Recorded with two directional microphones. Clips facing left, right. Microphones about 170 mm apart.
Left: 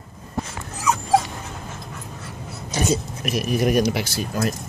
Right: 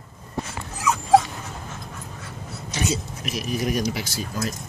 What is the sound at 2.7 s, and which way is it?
Speech, 45° left (ahead or behind).